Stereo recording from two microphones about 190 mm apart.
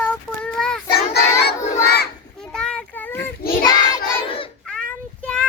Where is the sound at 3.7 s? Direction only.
25° left (ahead or behind).